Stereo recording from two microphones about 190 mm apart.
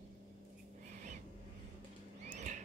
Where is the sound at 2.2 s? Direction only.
40° right (ahead or behind).